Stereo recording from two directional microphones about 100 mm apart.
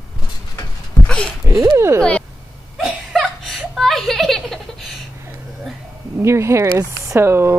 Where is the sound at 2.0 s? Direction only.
10° left (ahead or behind).